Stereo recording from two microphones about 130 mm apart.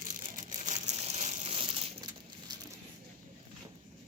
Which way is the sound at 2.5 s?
30° right (ahead or behind).